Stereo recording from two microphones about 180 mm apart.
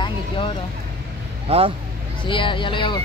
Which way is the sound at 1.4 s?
35° right (ahead or behind).